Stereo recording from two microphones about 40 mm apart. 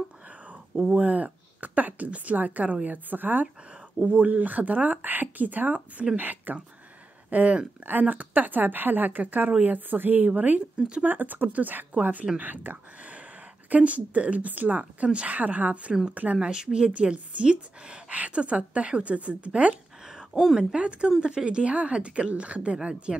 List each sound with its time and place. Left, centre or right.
0.9 s speech: right
4.0 s speech: right
7.2 s speech: right
13.7 s a woman's voice: right
20.3 s a woman's voice: centre
20.7 s a woman's voice: right